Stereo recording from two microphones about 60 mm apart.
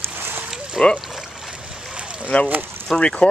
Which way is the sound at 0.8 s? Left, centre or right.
Centre.